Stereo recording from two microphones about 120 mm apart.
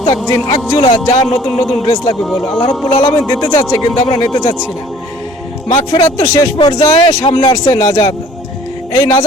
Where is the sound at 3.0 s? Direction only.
25° left (ahead or behind).